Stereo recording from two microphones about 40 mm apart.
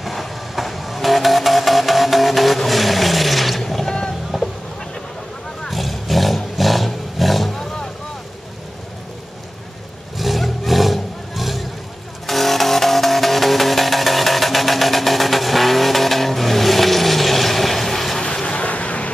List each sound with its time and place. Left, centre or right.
0.0 s vehicle: centre
4.3 s a sound: centre
5.7 s roar: centre
10.1 s roar: centre
12.3 s music: centre
18.2 s vehicle: left